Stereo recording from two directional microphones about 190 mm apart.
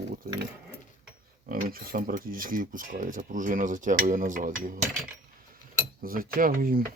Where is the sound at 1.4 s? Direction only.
50° right (ahead or behind).